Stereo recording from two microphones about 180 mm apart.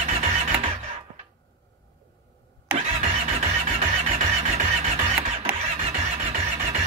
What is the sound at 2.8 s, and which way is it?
Music, 40° right (ahead or behind).